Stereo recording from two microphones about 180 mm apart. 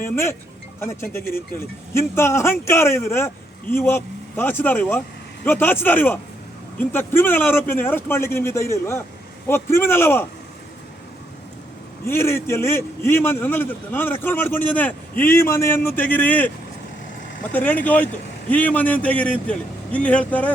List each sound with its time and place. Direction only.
0.0 s a man's voice: 15° left (ahead or behind)
12.0 s a man's voice: 15° left (ahead or behind)
17.5 s a man's voice: 10° left (ahead or behind)